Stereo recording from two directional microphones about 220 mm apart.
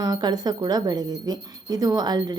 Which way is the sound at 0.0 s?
20° right (ahead or behind).